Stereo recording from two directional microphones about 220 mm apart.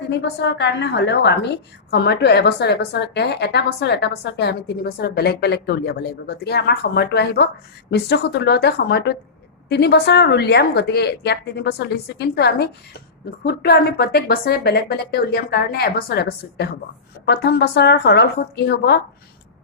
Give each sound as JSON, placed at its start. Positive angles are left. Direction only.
{"t": 0.1, "sound": "a woman's voice", "side_deg": 50}